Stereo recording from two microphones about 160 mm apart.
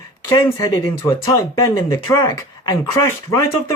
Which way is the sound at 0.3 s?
20° left (ahead or behind).